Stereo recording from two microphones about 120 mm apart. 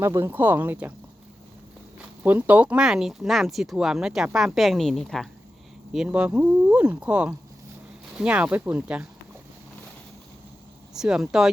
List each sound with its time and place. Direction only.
0.0 s speech: 20° right (ahead or behind)
2.0 s speech: 15° right (ahead or behind); by 5.3 s 5° left (ahead or behind)
5.9 s speech: 5° right (ahead or behind)
10.9 s speech: 5° right (ahead or behind)